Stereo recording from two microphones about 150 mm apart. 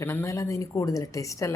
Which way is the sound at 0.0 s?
15° left (ahead or behind).